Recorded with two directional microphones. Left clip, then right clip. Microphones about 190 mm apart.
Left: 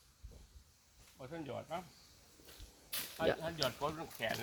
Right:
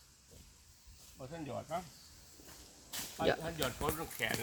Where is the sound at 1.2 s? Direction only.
30° left (ahead or behind).